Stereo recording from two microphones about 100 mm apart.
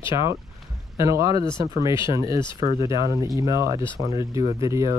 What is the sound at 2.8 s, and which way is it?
Speech, 60° left (ahead or behind).